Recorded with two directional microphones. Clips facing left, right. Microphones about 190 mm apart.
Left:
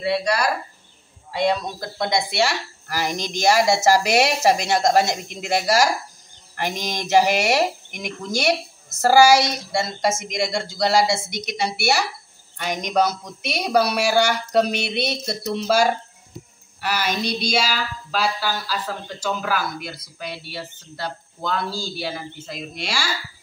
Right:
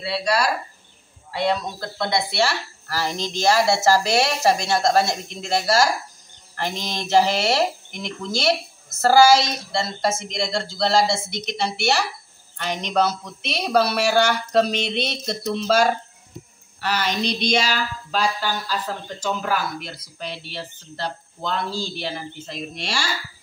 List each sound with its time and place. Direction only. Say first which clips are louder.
1.3 s speech: left 1 dB; 15° left (ahead or behind)